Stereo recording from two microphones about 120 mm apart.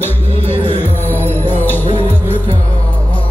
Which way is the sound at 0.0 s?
15° left (ahead or behind).